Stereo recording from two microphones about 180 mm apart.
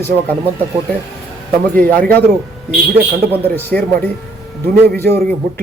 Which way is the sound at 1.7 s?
10° left (ahead or behind).